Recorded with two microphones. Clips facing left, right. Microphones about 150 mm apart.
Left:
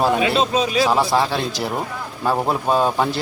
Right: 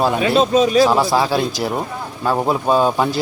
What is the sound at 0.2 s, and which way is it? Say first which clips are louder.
Speech: right 4 dB; 40° right (ahead or behind).